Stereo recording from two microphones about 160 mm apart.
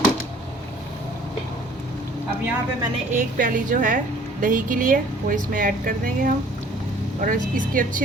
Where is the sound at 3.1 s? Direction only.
55° right (ahead or behind).